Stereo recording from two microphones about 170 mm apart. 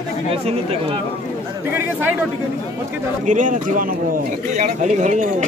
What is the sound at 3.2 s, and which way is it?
Speech, 50° right (ahead or behind).